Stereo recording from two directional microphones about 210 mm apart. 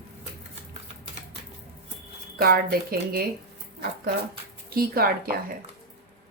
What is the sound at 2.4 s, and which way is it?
Speech, 45° right (ahead or behind).